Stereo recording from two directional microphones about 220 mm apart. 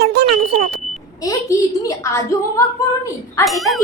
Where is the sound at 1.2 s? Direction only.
15° left (ahead or behind).